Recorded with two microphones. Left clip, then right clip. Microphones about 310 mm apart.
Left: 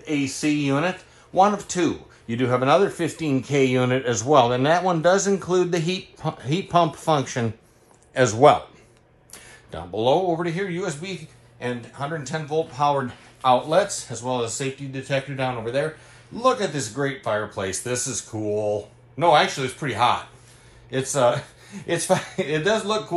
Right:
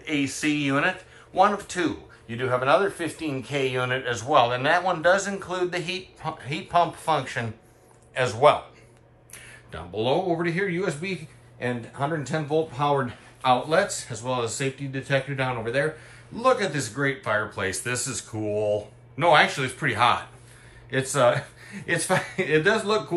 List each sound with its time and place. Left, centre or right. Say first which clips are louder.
0.0 s speech: left 1 dB; centre